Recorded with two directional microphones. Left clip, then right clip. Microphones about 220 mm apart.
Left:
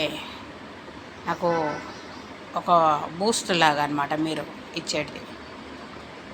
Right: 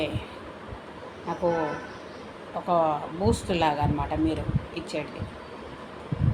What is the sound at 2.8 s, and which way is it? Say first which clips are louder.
Speech: left 3 dB; 25° left (ahead or behind).